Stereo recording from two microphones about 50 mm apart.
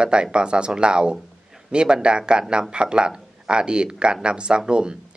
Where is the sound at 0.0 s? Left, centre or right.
Centre.